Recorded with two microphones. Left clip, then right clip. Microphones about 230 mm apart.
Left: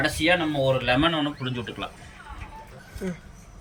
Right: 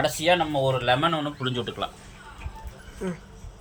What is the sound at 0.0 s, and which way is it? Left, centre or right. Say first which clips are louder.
Speech: even; right.